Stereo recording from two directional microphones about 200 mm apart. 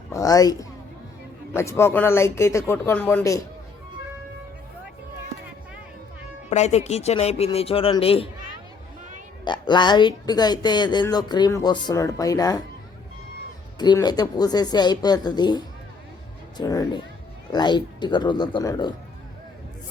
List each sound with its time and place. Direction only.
0.1 s a woman's voice: 15° left (ahead or behind)
6.5 s speech: 35° left (ahead or behind)
9.4 s speech: 20° left (ahead or behind)
13.7 s speech: 20° left (ahead or behind)